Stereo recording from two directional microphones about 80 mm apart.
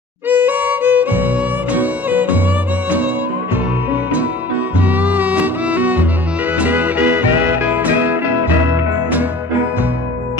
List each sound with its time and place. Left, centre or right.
0.3 s music: right
3.9 s music: centre